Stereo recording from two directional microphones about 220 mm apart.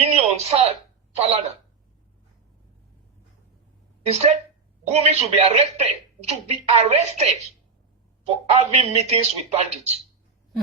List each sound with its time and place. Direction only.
0.0 s a sound: 30° right (ahead or behind)
1.1 s a man's voice: 30° right (ahead or behind)
4.1 s a man's voice: 30° right (ahead or behind)